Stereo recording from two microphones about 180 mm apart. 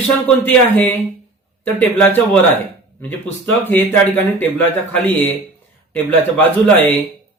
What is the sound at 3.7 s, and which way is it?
Speech, 10° left (ahead or behind).